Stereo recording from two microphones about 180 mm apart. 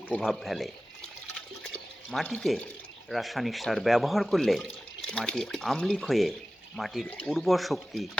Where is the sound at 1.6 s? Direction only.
5° left (ahead or behind).